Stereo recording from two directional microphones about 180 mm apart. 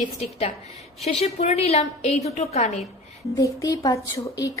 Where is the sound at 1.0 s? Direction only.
35° left (ahead or behind).